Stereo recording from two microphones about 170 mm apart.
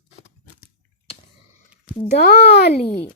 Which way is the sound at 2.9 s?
5° left (ahead or behind).